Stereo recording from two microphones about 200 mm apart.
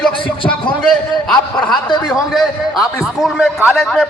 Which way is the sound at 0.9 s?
Centre (ahead or behind).